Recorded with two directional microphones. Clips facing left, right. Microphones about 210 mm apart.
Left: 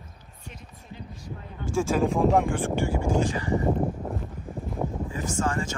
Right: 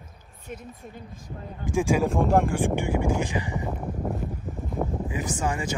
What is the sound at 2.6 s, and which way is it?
Speech, 15° right (ahead or behind).